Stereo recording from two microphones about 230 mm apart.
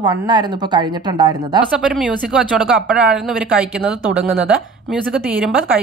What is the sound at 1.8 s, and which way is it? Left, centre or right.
Speech, centre.